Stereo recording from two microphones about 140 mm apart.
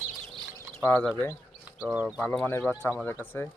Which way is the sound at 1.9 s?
5° right (ahead or behind).